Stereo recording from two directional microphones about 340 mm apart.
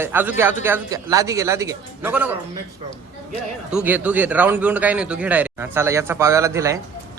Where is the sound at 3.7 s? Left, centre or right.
Centre.